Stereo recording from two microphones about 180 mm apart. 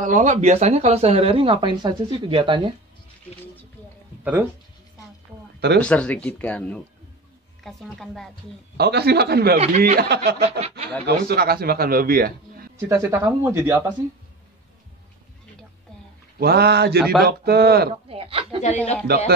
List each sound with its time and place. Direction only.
0.0 s speech: 40° right (ahead or behind)
4.2 s speech: 10° right (ahead or behind)
5.8 s a woman's voice: 5° left (ahead or behind)
8.7 s a man's voice: 65° right (ahead or behind)
9.6 s speech: 40° right (ahead or behind)
9.9 s a man's voice: 65° right (ahead or behind)
12.7 s speech: 15° right (ahead or behind)
16.3 s a man's voice: 60° right (ahead or behind)
17.0 s a woman's voice: centre (ahead or behind)
17.3 s a man's voice: 60° right (ahead or behind)
18.0 s a woman's voice: 30° right (ahead or behind)
19.0 s a man's voice: 60° right (ahead or behind)